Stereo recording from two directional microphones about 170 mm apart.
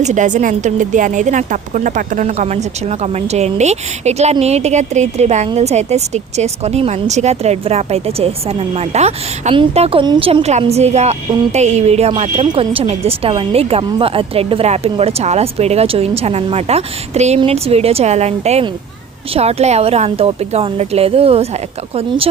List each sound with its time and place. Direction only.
0.0 s a woman's voice: 45° right (ahead or behind)